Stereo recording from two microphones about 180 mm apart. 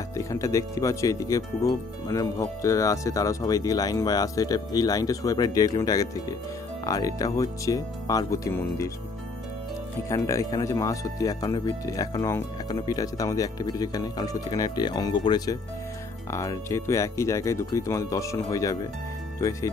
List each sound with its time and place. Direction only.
0.1 s speech: 15° left (ahead or behind)
10.0 s speech: 15° left (ahead or behind)